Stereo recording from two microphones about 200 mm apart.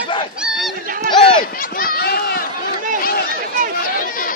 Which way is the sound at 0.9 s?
45° right (ahead or behind).